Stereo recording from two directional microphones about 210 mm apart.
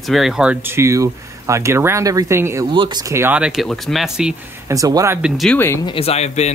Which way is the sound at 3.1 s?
10° right (ahead or behind).